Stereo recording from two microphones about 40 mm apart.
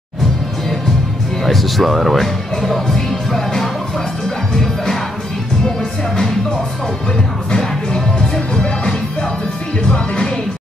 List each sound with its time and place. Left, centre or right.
1.4 s speech: centre
7.5 s music: left
9.8 s music: left